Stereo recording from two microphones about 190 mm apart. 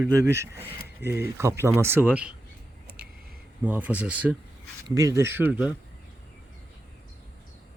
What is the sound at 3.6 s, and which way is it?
Speech, 10° right (ahead or behind).